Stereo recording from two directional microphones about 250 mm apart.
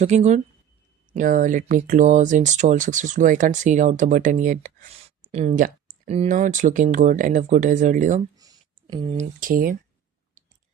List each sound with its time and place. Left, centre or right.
0.0 s speech: right
8.4 s speech: centre; by 9.7 s right